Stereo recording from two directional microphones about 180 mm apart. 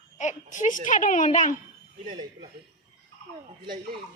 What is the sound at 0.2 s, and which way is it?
A child's voice, 45° left (ahead or behind).